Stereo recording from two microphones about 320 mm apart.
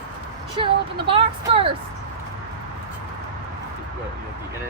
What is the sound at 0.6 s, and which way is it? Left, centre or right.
Speech, centre.